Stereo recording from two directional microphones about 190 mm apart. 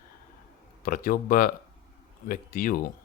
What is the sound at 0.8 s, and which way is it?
Speech, 50° left (ahead or behind).